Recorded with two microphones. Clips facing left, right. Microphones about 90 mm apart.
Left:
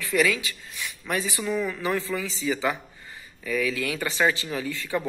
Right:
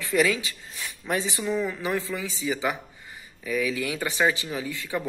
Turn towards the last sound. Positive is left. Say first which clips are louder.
# left 1 dB
turn(degrees=-15)  # may be behind; listen again after turning